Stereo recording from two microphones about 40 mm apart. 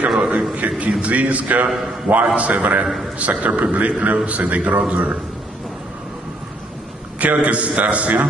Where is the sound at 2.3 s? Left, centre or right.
Right.